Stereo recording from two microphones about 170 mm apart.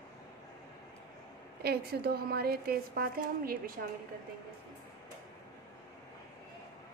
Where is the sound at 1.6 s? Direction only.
65° right (ahead or behind).